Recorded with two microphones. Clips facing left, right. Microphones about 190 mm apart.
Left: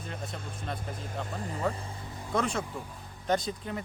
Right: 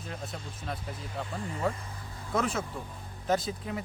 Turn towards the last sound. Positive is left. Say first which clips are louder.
# even
turn(degrees=-5)  # may be behind; listen again after turning